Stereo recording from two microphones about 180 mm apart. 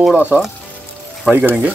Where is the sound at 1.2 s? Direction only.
10° right (ahead or behind).